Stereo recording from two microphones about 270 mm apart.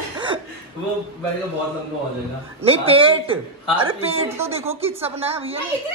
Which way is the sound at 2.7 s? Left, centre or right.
Centre.